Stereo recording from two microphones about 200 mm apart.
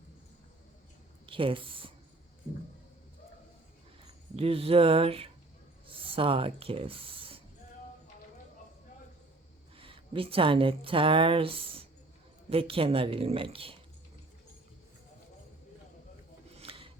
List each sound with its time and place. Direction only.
1.3 s a woman's voice: 25° right (ahead or behind)
4.4 s a woman's voice: 30° right (ahead or behind)
9.7 s a woman's voice: 25° right (ahead or behind)
16.6 s a sound: 25° right (ahead or behind)